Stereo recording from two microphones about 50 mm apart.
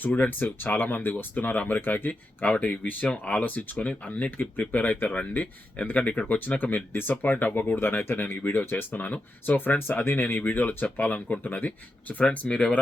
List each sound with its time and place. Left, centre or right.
0.0 s speech: left
2.4 s speech: left
12.5 s speech: centre